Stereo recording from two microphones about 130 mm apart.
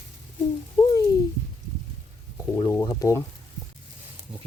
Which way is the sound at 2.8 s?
25° left (ahead or behind).